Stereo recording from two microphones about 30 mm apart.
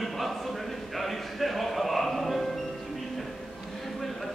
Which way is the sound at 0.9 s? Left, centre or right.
Centre.